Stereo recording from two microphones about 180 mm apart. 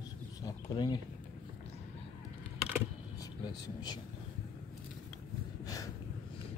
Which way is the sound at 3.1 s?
20° left (ahead or behind).